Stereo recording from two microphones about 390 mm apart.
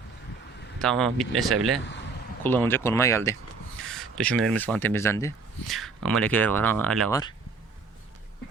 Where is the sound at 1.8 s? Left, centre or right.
Left.